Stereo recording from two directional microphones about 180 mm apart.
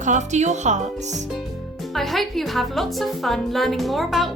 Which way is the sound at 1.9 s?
Centre (ahead or behind).